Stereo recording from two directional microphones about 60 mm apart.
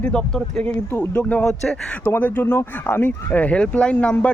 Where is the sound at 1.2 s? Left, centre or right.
Left.